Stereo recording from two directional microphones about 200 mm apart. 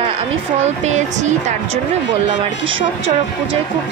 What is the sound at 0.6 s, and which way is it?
Speech, 35° right (ahead or behind).